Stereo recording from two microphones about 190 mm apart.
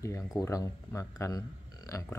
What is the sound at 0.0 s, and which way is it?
Speech, 15° left (ahead or behind).